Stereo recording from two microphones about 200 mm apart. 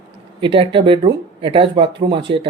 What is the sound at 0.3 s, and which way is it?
Speech, 25° right (ahead or behind).